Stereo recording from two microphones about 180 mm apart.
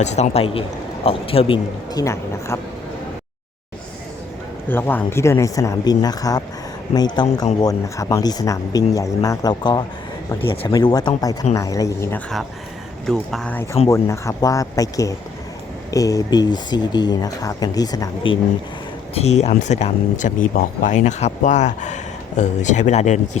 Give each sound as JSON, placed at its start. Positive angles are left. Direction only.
{"t": 0.0, "sound": "speech", "side_deg": 40}
{"t": 4.7, "sound": "speech", "side_deg": 10}
{"t": 13.1, "sound": "speech", "side_deg": 5}
{"t": 19.1, "sound": "speech", "side_deg": 35}